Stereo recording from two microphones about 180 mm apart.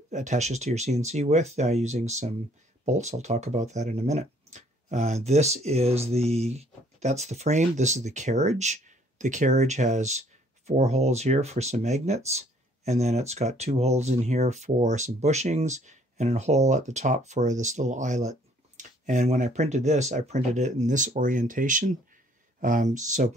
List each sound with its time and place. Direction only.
0.1 s speech: 40° right (ahead or behind)